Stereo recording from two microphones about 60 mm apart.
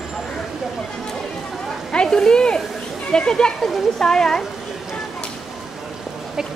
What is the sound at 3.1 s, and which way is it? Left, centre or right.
Speech, centre.